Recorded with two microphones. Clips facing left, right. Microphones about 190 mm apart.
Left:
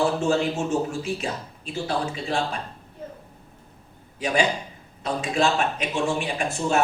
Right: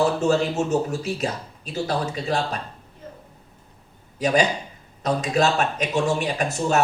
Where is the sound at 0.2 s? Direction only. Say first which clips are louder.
Right 2 dB; 40° right (ahead or behind).